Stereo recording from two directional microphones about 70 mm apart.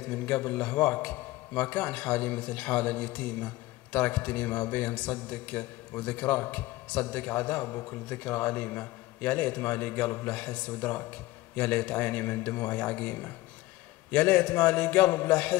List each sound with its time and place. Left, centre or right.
0.1 s a man's voice: left